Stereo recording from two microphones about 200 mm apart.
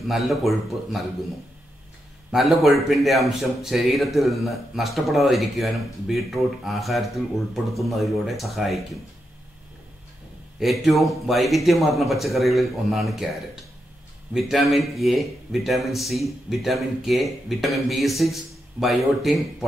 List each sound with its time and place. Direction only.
0.1 s speech: centre (ahead or behind)
2.3 s speech: centre (ahead or behind)
10.6 s speech: centre (ahead or behind)